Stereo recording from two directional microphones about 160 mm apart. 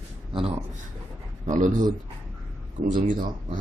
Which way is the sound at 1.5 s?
55° right (ahead or behind).